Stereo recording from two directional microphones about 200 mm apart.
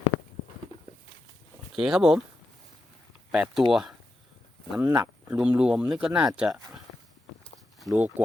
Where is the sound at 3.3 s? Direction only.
5° right (ahead or behind).